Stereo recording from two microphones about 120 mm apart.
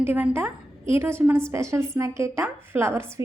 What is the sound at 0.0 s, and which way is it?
A woman's voice, 20° right (ahead or behind).